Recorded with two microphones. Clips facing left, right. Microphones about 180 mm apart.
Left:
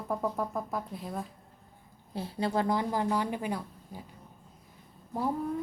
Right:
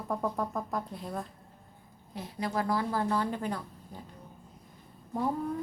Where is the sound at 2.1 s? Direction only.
30° left (ahead or behind); by 4.0 s 10° left (ahead or behind).